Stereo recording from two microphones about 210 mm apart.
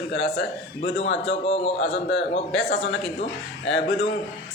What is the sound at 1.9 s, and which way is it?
A man's voice, 60° left (ahead or behind).